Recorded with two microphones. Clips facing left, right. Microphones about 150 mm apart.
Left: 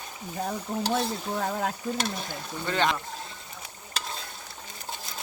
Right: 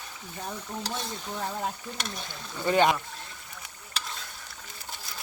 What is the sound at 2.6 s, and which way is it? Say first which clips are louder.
Speech: right 4 dB; 15° right (ahead or behind).